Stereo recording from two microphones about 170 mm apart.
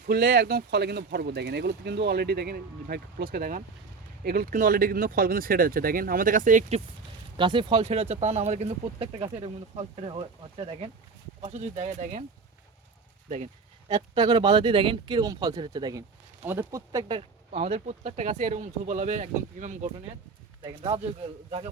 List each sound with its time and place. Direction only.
0.0 s speech: 65° right (ahead or behind); by 6.8 s 45° right (ahead or behind)
7.3 s speech: 30° right (ahead or behind); by 12.2 s 45° right (ahead or behind)
13.8 s speech: 25° right (ahead or behind)
16.4 s speech: 10° right (ahead or behind); by 19.9 s 45° right (ahead or behind)
20.6 s speech: 25° right (ahead or behind)